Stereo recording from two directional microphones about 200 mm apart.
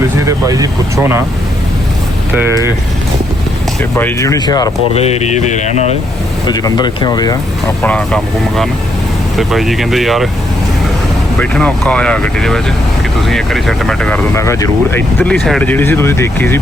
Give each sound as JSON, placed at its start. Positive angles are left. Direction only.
{"t": 0.3, "sound": "speech", "side_deg": -15}
{"t": 2.3, "sound": "speech", "side_deg": -10}
{"t": 3.9, "sound": "speech", "side_deg": 15}
{"t": 4.9, "sound": "mantra", "side_deg": 30}
{"t": 6.5, "sound": "speech", "side_deg": 20}
{"t": 7.8, "sound": "speech", "side_deg": 5}
{"t": 11.3, "sound": "speech", "side_deg": 5}